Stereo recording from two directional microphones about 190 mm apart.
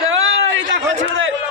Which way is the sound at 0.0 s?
90° right.